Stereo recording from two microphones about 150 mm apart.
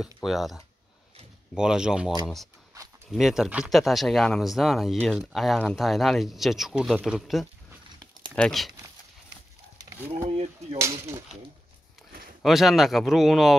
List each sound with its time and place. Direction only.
0.2 s speech: centre (ahead or behind)
10.2 s speech: 45° right (ahead or behind)
10.8 s speech: 20° right (ahead or behind)
12.4 s speech: centre (ahead or behind)